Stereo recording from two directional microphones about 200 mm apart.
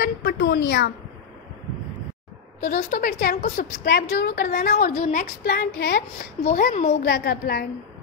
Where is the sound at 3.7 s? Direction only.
55° left (ahead or behind); by 5.3 s 35° left (ahead or behind).